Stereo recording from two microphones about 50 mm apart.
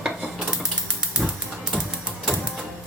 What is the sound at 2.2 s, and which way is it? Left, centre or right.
Printer, centre.